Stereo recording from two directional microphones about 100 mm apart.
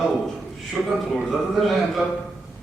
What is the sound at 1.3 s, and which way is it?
Speech, centre (ahead or behind).